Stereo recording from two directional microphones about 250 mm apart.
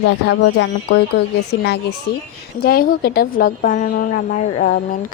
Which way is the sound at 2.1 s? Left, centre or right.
Left.